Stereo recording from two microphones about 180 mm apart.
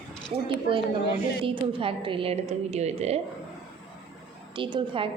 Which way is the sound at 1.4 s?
30° right (ahead or behind).